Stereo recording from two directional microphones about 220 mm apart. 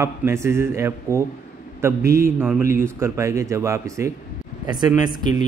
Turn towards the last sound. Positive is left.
turn(degrees=-20)  # may be behind; listen again after turning